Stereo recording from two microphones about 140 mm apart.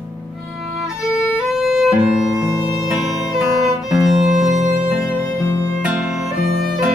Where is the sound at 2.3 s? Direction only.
20° right (ahead or behind).